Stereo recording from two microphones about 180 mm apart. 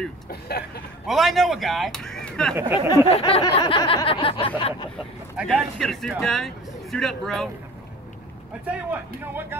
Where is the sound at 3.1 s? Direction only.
30° left (ahead or behind).